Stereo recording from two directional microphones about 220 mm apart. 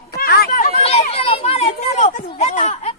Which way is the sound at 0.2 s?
40° left (ahead or behind).